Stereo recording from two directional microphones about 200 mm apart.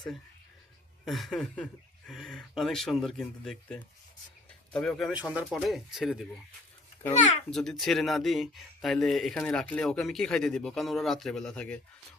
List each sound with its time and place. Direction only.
1.0 s speech: centre (ahead or behind)
7.1 s a child's voice: 35° left (ahead or behind)
7.5 s speech: centre (ahead or behind)